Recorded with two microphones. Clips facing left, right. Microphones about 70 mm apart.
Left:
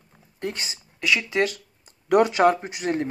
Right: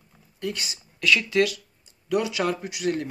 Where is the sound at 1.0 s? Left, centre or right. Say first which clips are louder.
Right 1 dB; centre.